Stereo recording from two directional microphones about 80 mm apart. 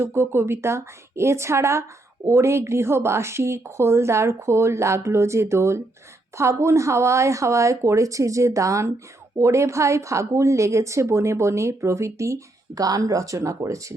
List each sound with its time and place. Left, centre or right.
0.0 s speech: right